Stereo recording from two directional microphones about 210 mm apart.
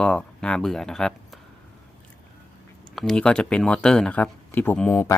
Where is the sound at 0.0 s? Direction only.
5° left (ahead or behind).